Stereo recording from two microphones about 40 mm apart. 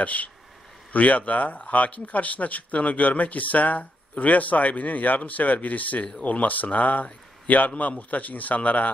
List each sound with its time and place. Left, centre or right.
0.0 s speech: left